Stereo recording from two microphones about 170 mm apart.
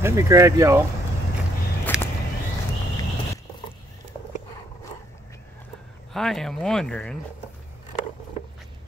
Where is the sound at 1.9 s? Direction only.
5° right (ahead or behind).